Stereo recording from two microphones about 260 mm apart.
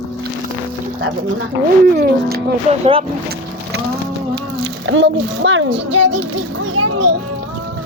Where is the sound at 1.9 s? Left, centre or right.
Right.